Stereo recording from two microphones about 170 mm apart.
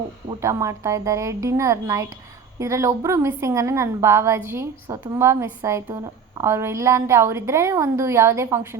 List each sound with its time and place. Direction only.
0.4 s a woman's voice: 15° right (ahead or behind)